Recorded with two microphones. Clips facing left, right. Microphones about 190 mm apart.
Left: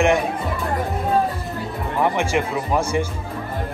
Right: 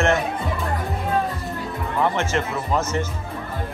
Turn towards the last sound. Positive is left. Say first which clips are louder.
# left 2 dB
turn(degrees=10)  # may be behind; listen again after turning